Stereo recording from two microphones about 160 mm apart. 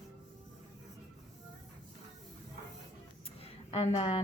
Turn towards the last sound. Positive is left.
turn(degrees=40)  # may be behind; listen again after turning